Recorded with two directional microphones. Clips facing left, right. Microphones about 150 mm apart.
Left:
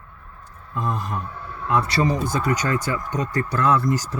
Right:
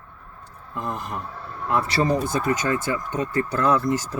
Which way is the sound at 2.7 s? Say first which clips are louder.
Even; 25° right (ahead or behind).